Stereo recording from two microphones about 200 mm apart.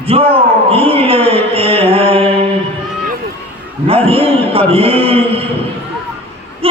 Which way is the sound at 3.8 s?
30° right (ahead or behind).